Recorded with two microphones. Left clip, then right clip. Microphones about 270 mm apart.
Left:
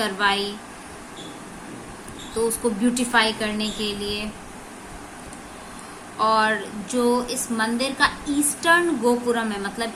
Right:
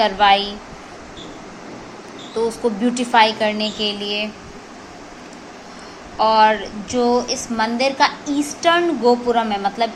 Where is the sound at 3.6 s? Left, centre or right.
Centre.